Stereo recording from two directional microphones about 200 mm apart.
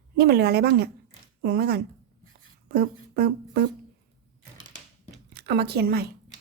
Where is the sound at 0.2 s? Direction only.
55° right (ahead or behind).